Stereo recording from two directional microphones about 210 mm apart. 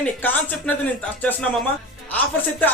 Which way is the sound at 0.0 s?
5° left (ahead or behind).